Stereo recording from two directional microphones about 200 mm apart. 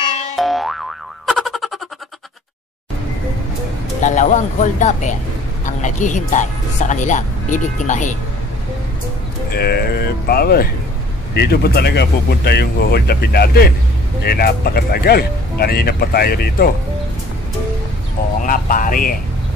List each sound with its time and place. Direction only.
0.4 s boing: centre (ahead or behind)
4.0 s speech: 35° left (ahead or behind)
9.6 s speech: 50° left (ahead or behind)
18.4 s a sound: 40° left (ahead or behind)